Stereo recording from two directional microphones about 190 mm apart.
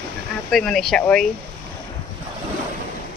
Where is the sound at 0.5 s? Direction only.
Centre (ahead or behind).